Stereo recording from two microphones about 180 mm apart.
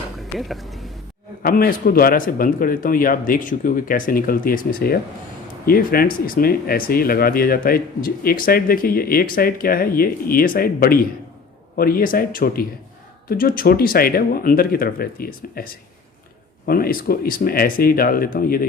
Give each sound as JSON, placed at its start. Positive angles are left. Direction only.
{"t": 0.3, "sound": "speech", "side_deg": 0}
{"t": 1.4, "sound": "speech", "side_deg": 55}